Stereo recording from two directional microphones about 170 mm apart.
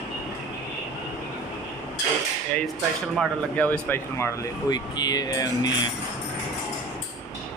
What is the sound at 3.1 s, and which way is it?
Speech, 5° left (ahead or behind).